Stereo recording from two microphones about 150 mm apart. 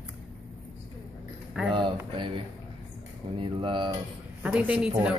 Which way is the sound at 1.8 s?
35° right (ahead or behind).